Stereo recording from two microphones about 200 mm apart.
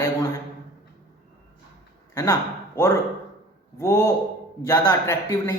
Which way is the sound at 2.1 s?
15° left (ahead or behind).